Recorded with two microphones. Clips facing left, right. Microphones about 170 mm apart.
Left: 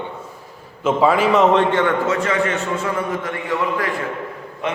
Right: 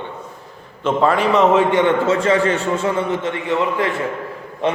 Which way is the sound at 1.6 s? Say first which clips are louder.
Right 2 dB; 15° right (ahead or behind).